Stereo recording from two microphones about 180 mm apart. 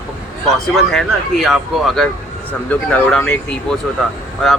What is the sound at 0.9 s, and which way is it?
Speech, centre (ahead or behind).